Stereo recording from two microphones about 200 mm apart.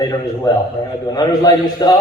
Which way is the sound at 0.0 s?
20° left (ahead or behind).